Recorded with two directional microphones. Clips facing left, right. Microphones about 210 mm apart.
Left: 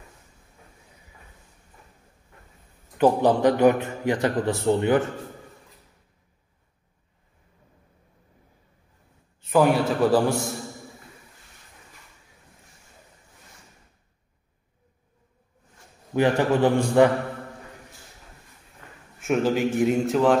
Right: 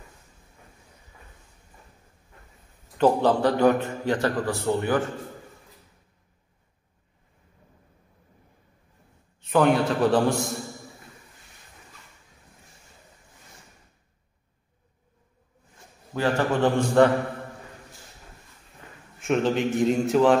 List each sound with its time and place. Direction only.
3.0 s a man's voice: 15° left (ahead or behind)
9.5 s a man's voice: 5° left (ahead or behind)
16.2 s a man's voice: 15° left (ahead or behind)
19.2 s a man's voice: 5° left (ahead or behind)